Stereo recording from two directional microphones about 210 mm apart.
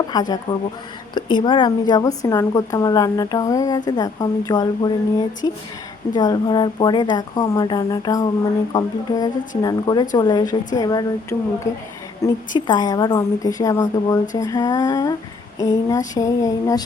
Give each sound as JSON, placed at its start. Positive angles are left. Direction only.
{"t": 0.1, "sound": "a woman's voice", "side_deg": 20}